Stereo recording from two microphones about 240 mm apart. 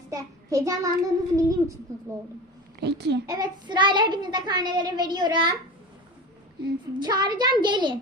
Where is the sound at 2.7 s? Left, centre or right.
Right.